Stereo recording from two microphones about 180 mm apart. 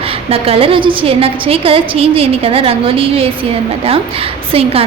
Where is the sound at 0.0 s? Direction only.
30° right (ahead or behind).